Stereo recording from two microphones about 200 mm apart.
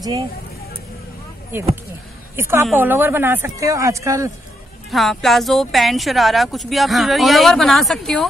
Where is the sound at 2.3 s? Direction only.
10° right (ahead or behind).